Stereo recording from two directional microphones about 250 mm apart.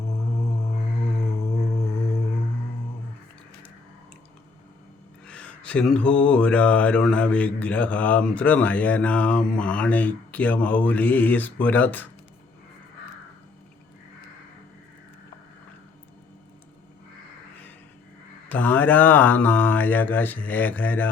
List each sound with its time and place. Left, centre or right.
1.3 s a sound: left
5.2 s mantra: centre
18.4 s mantra: centre